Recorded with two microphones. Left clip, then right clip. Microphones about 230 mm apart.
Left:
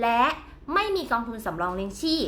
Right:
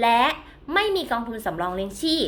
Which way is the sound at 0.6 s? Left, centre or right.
Centre.